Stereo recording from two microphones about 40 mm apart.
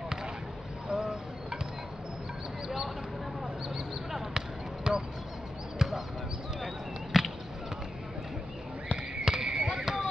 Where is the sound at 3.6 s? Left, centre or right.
Centre.